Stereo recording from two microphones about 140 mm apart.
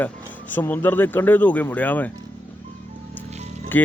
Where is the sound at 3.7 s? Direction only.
10° left (ahead or behind).